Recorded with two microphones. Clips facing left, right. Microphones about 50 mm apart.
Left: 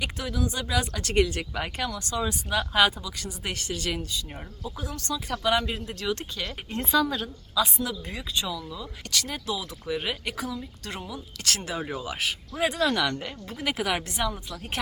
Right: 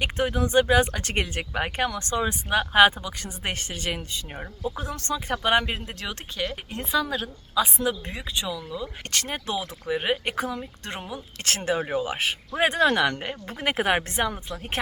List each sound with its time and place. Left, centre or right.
0.0 s speech: right; by 6.5 s centre
6.5 s speech: centre
7.5 s speech: right
9.0 s speech: right
9.8 s speech: right